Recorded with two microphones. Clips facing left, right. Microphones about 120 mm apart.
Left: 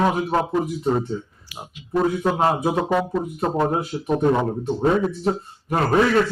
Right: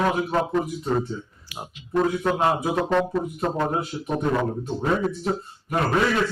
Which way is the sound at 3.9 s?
30° left (ahead or behind).